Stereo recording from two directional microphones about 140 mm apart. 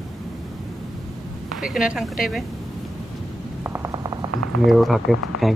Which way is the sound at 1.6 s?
5° right (ahead or behind).